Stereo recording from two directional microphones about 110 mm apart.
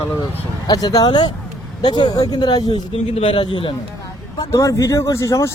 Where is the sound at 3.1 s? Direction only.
55° left (ahead or behind).